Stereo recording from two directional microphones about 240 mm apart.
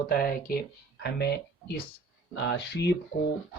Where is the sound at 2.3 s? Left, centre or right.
Left.